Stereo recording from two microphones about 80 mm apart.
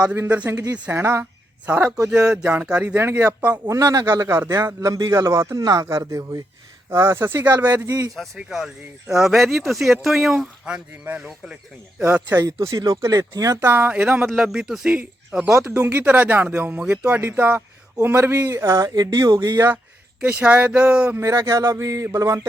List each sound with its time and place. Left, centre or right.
0.3 s speech: centre
3.7 s a man's voice: right
7.9 s a man's voice: right
8.4 s speech: centre
10.3 s speech: centre
12.3 s a man's voice: right
13.6 s speech: right
18.3 s speech: right
18.9 s a man's voice: right
19.5 s speech: right
20.2 s speech: centre
21.2 s speech: right